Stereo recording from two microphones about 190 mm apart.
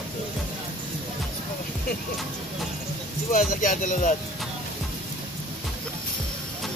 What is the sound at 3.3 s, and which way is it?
Speech, 40° left (ahead or behind).